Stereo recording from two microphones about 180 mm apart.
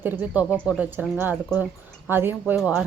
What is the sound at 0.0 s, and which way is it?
Speech, 10° right (ahead or behind).